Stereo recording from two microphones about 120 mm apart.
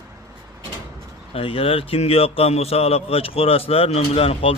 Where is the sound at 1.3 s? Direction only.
50° left (ahead or behind).